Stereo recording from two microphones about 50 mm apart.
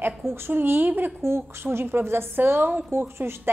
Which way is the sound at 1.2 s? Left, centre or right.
Right.